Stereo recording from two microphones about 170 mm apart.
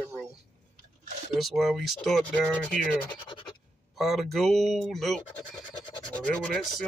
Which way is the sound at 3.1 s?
30° left (ahead or behind).